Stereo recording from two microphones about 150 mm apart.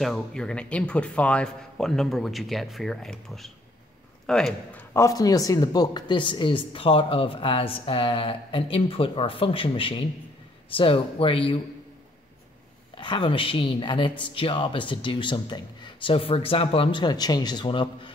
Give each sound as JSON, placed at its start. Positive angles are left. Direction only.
{"t": 0.0, "sound": "speech", "side_deg": 5}
{"t": 4.9, "sound": "speech", "side_deg": 25}
{"t": 12.9, "sound": "speech", "side_deg": 30}